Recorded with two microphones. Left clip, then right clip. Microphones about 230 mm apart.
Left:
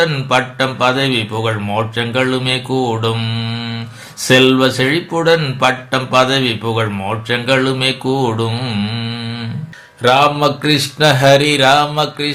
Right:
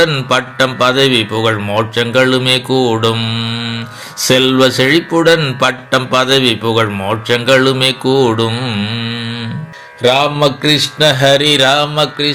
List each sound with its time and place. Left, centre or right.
0.0 s speech: right